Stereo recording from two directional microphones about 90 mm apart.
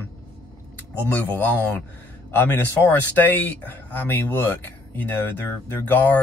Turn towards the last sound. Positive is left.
turn(degrees=20)  # may be behind; listen again after turning